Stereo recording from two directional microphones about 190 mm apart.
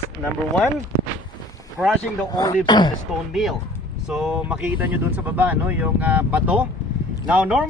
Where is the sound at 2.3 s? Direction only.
20° left (ahead or behind).